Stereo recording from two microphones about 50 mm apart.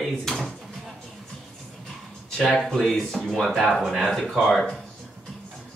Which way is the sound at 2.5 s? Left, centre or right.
Centre.